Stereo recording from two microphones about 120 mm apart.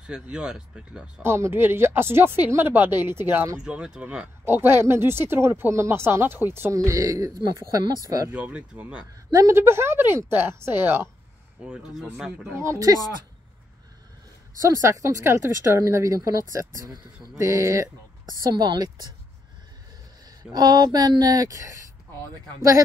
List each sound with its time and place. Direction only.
0.0 s speech: 5° right (ahead or behind)
1.2 s speech: 20° right (ahead or behind)
3.5 s speech: 5° right (ahead or behind)
4.5 s speech: 20° right (ahead or behind); by 8.3 s 35° right (ahead or behind)
8.3 s speech: 10° right (ahead or behind)
9.3 s speech: 25° right (ahead or behind)
11.6 s speech: 5° right (ahead or behind)
12.5 s speech: 25° right (ahead or behind)
14.6 s speech: 25° right (ahead or behind)
18.4 s speech: 35° right (ahead or behind)
20.5 s speech: 35° right (ahead or behind)